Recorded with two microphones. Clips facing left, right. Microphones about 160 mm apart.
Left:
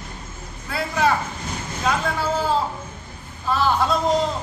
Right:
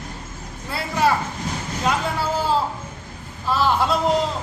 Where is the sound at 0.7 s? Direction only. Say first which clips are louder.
Even; 5° right (ahead or behind).